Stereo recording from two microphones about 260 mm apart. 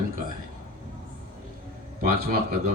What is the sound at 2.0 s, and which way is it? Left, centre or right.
Speech, right.